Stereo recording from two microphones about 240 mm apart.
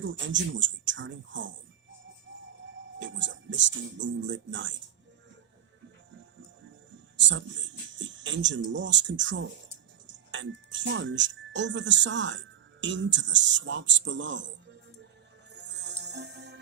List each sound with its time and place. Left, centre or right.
0.0 s speech: right
3.0 s speech: right
7.2 s speech: right
15.5 s music: right